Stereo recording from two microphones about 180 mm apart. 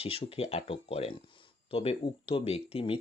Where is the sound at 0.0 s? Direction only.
30° left (ahead or behind).